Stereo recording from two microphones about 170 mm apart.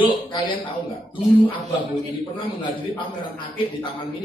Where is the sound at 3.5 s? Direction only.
30° left (ahead or behind).